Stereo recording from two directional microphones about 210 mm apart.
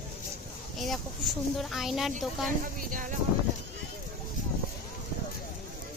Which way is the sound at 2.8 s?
40° right (ahead or behind).